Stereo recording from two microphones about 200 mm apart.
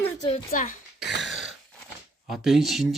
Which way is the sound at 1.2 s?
Centre (ahead or behind).